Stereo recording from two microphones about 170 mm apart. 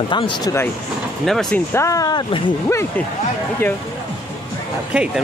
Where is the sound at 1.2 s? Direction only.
Centre (ahead or behind).